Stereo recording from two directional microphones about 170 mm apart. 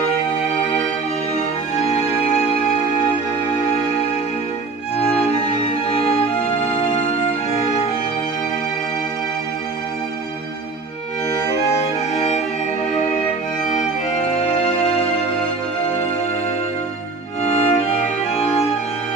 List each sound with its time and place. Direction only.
1.9 s music: 40° left (ahead or behind)
5.0 s music: 35° left (ahead or behind)
17.4 s music: 40° left (ahead or behind)